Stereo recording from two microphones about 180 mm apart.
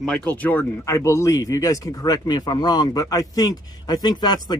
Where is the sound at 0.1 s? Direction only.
10° left (ahead or behind).